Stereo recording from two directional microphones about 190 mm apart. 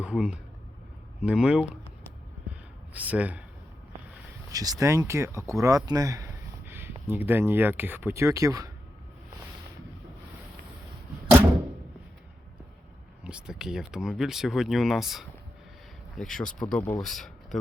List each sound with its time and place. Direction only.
0.0 s speech: 5° right (ahead or behind)
2.9 s speech: 10° right (ahead or behind)
4.5 s speech: 20° right (ahead or behind)
13.2 s speech: 5° right (ahead or behind)